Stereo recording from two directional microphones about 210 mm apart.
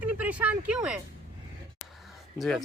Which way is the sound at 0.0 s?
5° right (ahead or behind).